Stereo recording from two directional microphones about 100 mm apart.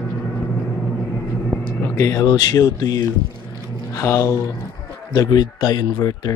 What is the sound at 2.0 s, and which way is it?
Speech, 30° left (ahead or behind).